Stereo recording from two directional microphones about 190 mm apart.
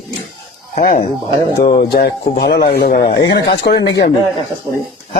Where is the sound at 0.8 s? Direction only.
45° left (ahead or behind).